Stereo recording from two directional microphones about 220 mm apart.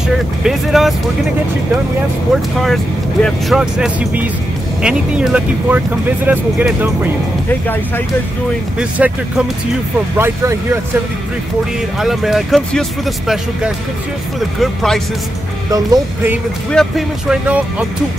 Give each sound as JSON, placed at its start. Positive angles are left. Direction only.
{"t": 0.4, "sound": "speech", "side_deg": 0}
{"t": 2.6, "sound": "speech", "side_deg": 0}
{"t": 8.7, "sound": "speech", "side_deg": -5}
{"t": 12.0, "sound": "speech", "side_deg": 0}
{"t": 15.7, "sound": "speech", "side_deg": -15}
{"t": 16.7, "sound": "speech", "side_deg": 0}